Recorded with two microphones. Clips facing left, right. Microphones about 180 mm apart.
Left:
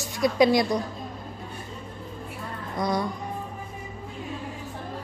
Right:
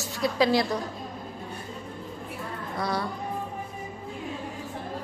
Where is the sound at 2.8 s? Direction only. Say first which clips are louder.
Left 3 dB; 15° left (ahead or behind).